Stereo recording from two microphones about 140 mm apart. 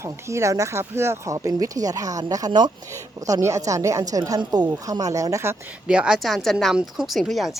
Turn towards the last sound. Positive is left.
turn(degrees=0)  # may be behind; listen again after turning